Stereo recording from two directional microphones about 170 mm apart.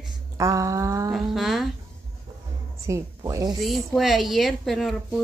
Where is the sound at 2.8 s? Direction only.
15° right (ahead or behind).